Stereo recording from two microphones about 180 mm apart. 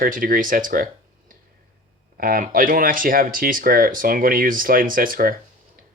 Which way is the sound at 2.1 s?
50° right (ahead or behind).